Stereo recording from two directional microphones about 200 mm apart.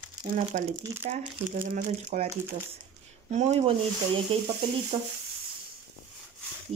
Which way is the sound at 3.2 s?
35° right (ahead or behind).